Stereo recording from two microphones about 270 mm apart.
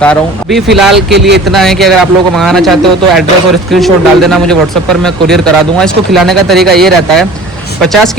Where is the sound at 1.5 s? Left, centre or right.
Centre.